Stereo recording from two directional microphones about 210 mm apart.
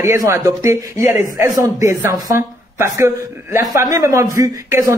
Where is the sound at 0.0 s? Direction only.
15° right (ahead or behind).